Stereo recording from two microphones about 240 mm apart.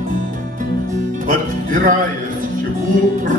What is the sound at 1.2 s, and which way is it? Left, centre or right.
Music, right.